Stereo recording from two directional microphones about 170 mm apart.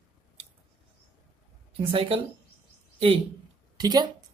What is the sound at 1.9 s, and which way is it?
Speech, 35° right (ahead or behind).